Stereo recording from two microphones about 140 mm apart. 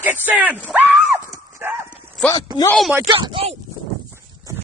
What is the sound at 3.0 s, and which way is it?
Speech, 35° right (ahead or behind).